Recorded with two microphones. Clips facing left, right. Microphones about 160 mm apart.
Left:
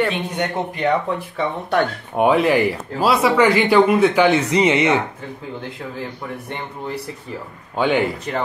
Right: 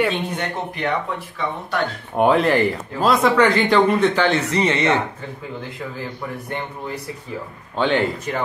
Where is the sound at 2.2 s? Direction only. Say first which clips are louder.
Left 1 dB; 5° left (ahead or behind).